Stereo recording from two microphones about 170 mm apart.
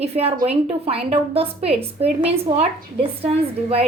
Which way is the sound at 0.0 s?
35° right (ahead or behind).